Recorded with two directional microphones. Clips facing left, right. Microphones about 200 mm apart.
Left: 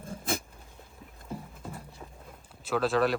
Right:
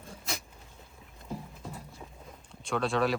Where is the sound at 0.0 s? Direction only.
50° left (ahead or behind).